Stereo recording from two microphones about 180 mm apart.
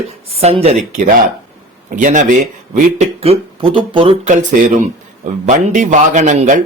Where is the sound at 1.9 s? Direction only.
45° right (ahead or behind).